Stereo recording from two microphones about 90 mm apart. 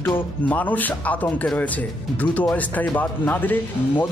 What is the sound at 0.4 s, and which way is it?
A man's voice, 15° left (ahead or behind).